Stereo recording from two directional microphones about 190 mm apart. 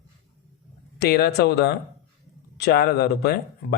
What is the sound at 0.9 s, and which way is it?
Speech, 55° left (ahead or behind).